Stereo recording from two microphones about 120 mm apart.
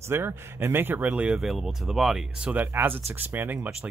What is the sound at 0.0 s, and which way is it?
Speech, 20° right (ahead or behind).